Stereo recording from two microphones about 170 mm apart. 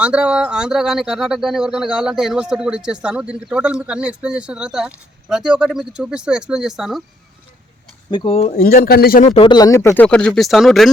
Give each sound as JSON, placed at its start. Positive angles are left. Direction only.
{"t": 0.0, "sound": "speech", "side_deg": -5}
{"t": 8.1, "sound": "speech", "side_deg": 30}
{"t": 8.5, "sound": "speech", "side_deg": 65}
{"t": 9.2, "sound": "speech", "side_deg": 35}